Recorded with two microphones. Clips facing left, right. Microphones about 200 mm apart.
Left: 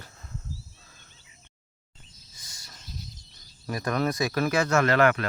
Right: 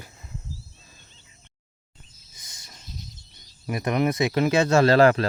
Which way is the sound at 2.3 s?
20° right (ahead or behind).